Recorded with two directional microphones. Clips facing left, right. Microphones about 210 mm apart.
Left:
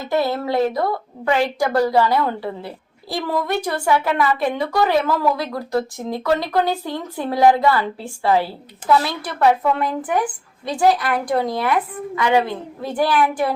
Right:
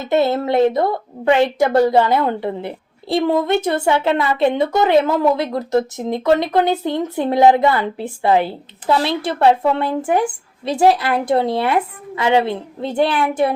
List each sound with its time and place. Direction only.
0.0 s a woman's voice: 25° right (ahead or behind)